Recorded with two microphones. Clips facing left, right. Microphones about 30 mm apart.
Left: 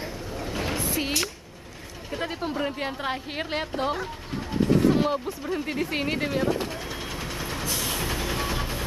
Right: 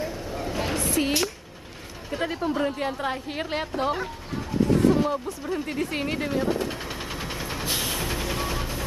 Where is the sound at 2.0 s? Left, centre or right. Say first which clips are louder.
Right 3 dB; centre.